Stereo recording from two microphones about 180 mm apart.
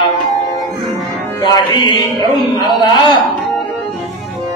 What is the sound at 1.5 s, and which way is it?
Music, 25° left (ahead or behind).